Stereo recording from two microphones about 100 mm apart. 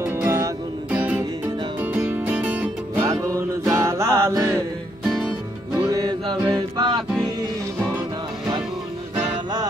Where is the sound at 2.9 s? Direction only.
35° right (ahead or behind).